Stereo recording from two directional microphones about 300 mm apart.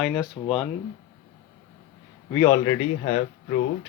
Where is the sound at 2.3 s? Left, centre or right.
Centre.